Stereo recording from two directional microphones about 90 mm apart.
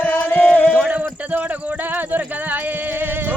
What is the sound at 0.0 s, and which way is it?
Music, 20° left (ahead or behind).